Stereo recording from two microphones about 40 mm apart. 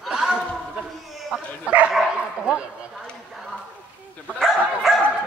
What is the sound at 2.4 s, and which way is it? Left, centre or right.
Speech, right.